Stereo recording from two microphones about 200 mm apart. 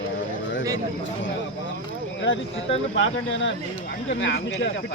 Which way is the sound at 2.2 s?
70° left (ahead or behind).